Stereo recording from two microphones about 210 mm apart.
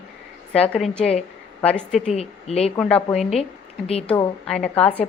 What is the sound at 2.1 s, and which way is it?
Speech, 30° left (ahead or behind).